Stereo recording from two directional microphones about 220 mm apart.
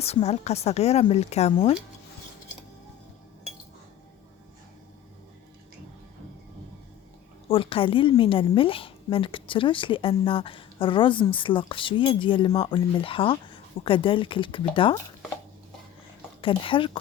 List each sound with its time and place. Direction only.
0.0 s a woman's voice: 30° left (ahead or behind)
7.4 s a woman's voice: 25° left (ahead or behind)
16.4 s a woman's voice: 25° left (ahead or behind)